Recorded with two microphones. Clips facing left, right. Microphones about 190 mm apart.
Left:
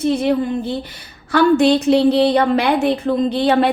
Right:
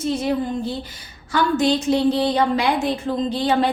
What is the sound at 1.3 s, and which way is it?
A woman's voice, 65° left (ahead or behind).